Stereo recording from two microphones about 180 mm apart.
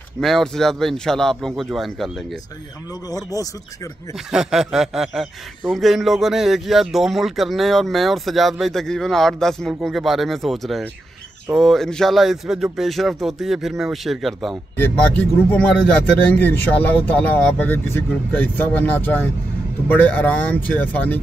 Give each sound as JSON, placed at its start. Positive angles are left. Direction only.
{"t": 0.2, "sound": "speech", "side_deg": 0}
{"t": 3.1, "sound": "speech", "side_deg": 20}
{"t": 4.3, "sound": "speech", "side_deg": -5}